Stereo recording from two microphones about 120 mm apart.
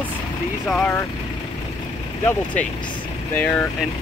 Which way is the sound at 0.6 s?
10° left (ahead or behind).